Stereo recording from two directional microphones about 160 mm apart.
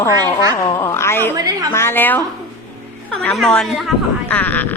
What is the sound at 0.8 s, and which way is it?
A woman's voice, 15° left (ahead or behind).